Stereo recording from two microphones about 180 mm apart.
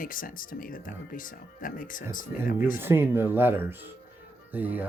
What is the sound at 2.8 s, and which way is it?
Speech, 10° right (ahead or behind).